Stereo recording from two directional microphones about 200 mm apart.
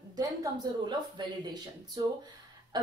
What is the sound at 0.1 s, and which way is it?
A woman's voice, 20° right (ahead or behind).